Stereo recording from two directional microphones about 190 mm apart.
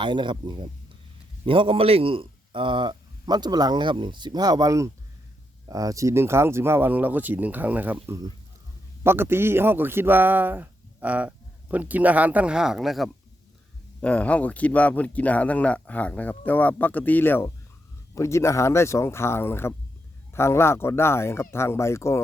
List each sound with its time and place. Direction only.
0.0 s speech: 25° right (ahead or behind); by 22.2 s 15° left (ahead or behind)